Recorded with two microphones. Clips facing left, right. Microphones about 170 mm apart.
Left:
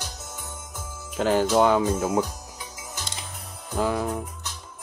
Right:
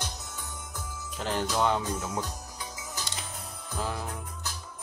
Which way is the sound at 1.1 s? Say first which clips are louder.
Left 9 dB; 90° left.